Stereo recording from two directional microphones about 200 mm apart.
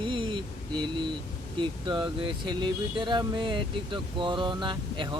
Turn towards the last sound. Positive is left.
turn(degrees=-20)  # may be behind; listen again after turning